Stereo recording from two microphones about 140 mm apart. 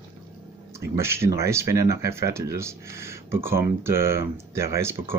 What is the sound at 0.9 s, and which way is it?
Speech, 20° right (ahead or behind).